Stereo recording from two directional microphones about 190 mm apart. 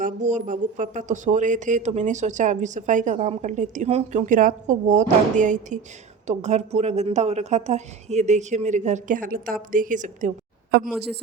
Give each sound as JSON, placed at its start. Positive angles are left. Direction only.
{"t": 0.0, "sound": "speech", "side_deg": -40}
{"t": 10.8, "sound": "a woman's voice", "side_deg": 0}